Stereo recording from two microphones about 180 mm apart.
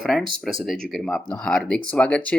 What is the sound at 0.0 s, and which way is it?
Speech, centre (ahead or behind).